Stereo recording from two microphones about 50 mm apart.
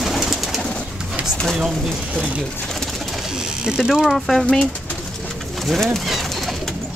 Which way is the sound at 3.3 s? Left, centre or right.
Centre.